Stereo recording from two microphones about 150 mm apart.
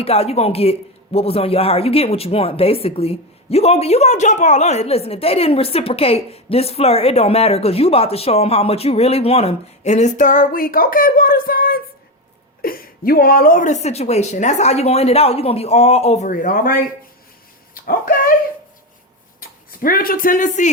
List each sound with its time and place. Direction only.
0.0 s a woman's voice: 40° left (ahead or behind); by 16.8 s 70° left (ahead or behind)
17.7 s speech: 80° left
19.4 s speech: 70° left (ahead or behind)